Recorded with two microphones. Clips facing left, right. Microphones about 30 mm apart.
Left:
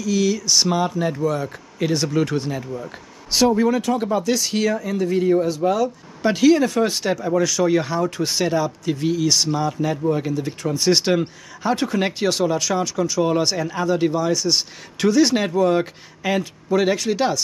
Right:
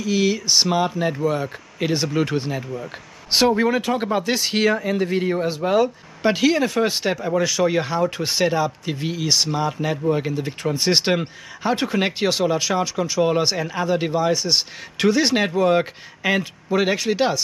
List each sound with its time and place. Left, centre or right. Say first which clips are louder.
0.0 s speech: even; right
3.3 s speech: even; right
6.2 s speech: left 2 dB; centre